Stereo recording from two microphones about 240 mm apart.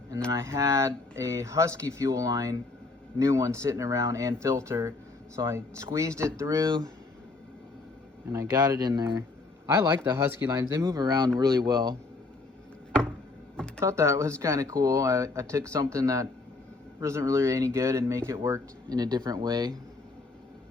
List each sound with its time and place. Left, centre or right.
0.3 s speech: centre
8.3 s speech: centre
13.7 s speech: centre